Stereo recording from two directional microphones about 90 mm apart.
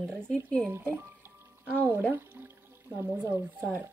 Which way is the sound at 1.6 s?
20° right (ahead or behind).